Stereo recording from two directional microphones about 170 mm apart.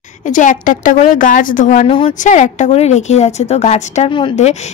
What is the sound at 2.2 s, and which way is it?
A woman's voice, 45° left (ahead or behind).